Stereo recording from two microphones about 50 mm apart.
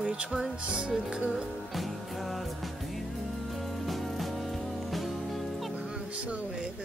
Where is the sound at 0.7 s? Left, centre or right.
Centre.